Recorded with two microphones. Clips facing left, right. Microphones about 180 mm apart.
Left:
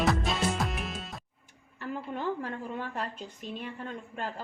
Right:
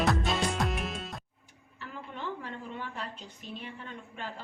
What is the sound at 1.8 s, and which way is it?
A woman's voice, 45° left (ahead or behind).